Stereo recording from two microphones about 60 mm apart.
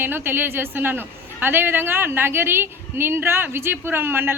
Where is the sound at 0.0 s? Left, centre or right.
Right.